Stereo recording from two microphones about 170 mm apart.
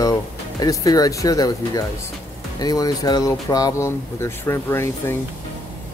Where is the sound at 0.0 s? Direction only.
20° left (ahead or behind).